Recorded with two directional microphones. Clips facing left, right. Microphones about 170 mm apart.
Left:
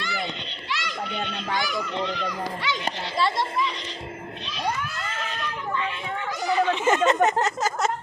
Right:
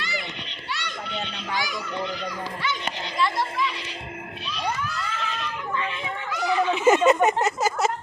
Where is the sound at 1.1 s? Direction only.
50° left (ahead or behind).